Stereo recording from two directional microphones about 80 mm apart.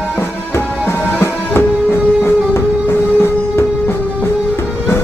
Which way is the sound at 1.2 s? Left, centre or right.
Left.